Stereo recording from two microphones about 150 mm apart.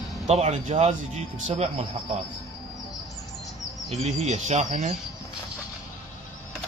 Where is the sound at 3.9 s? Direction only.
50° right (ahead or behind).